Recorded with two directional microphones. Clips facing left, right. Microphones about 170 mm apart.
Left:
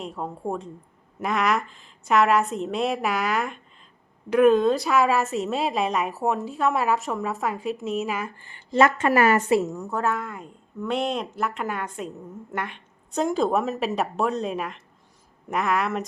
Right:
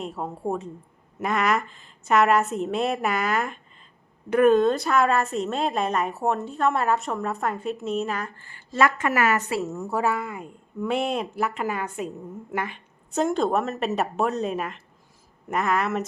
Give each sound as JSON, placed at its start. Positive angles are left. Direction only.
{"t": 0.0, "sound": "a woman's voice", "side_deg": -5}
{"t": 8.4, "sound": "a woman's voice", "side_deg": 20}
{"t": 9.6, "sound": "a woman's voice", "side_deg": -10}